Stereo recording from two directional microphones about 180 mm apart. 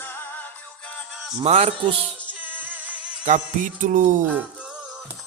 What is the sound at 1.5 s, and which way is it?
Speech, 35° right (ahead or behind).